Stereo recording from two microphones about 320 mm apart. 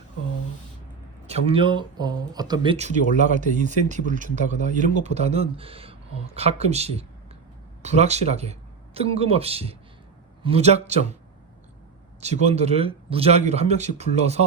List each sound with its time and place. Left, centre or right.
1.3 s speech: centre
12.2 s speech: right